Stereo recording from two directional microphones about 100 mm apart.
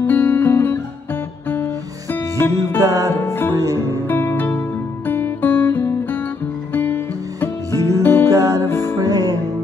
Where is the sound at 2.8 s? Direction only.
35° right (ahead or behind).